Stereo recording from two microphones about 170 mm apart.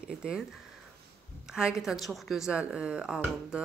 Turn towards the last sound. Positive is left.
turn(degrees=-5)  # may be behind; listen again after turning